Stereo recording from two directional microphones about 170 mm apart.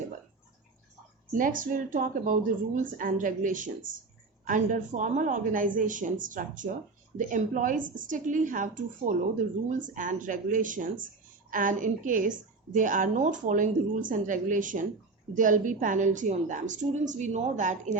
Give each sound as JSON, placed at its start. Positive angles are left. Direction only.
{"t": 1.3, "sound": "a woman's voice", "side_deg": -55}